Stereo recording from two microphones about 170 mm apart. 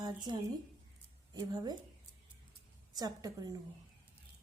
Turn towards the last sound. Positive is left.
turn(degrees=-20)  # may be behind; listen again after turning